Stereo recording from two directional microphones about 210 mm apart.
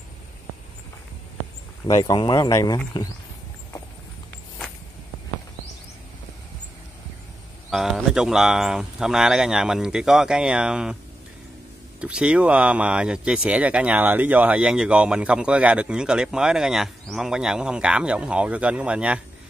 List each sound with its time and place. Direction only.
1.9 s speech: 15° left (ahead or behind)
7.7 s speech: centre (ahead or behind)
12.0 s speech: 5° right (ahead or behind)